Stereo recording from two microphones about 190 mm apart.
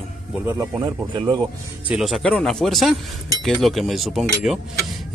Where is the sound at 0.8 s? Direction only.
25° right (ahead or behind).